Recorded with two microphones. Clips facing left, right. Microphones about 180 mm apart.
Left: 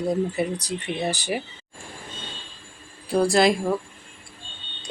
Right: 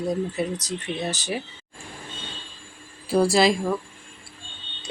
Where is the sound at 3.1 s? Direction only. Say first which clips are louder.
Even; centre (ahead or behind).